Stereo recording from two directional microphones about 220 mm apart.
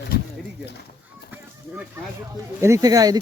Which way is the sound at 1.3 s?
10° right (ahead or behind).